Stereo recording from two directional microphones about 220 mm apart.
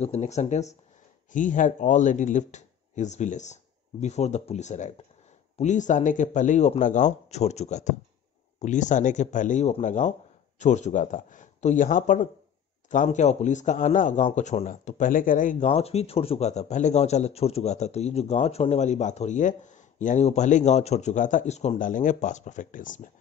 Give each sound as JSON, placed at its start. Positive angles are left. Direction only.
{"t": 0.0, "sound": "a man's voice", "side_deg": 30}